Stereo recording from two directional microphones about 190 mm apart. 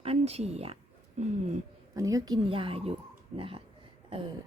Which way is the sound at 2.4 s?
30° right (ahead or behind).